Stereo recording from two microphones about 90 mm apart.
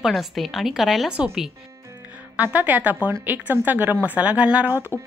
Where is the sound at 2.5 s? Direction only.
20° right (ahead or behind).